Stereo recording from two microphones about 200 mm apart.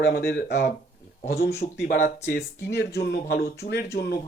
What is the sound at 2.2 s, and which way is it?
Speech, 50° left (ahead or behind).